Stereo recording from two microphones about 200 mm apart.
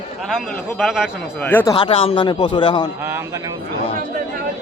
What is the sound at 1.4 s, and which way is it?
Speech, 10° left (ahead or behind).